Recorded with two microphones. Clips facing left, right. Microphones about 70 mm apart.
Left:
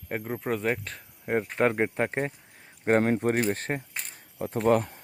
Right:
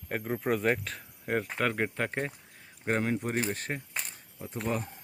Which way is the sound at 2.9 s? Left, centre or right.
Left.